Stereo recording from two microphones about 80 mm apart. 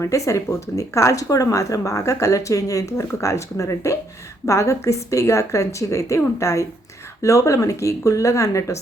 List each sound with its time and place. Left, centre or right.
0.0 s speech: left